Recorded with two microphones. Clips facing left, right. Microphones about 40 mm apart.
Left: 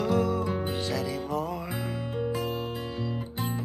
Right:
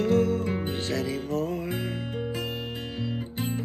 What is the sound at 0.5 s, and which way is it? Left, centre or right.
Music, right.